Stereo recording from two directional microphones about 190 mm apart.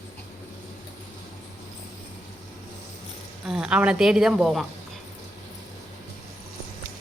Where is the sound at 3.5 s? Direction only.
5° right (ahead or behind).